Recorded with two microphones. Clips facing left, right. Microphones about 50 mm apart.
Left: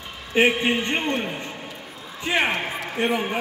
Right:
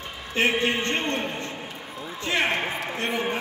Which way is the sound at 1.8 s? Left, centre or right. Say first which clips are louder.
Right 3 dB; right.